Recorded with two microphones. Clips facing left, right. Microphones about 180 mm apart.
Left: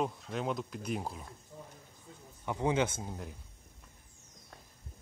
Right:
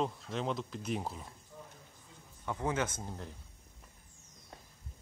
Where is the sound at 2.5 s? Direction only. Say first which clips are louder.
Left 4 dB; 15° left (ahead or behind).